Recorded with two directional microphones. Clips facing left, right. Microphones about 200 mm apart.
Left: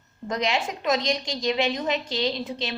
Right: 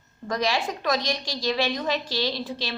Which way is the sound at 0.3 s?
20° left (ahead or behind).